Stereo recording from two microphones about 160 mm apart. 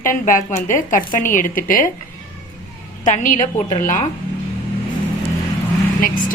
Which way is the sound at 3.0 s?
50° left (ahead or behind).